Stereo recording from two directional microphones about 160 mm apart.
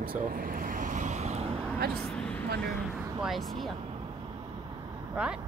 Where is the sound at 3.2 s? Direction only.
Centre (ahead or behind).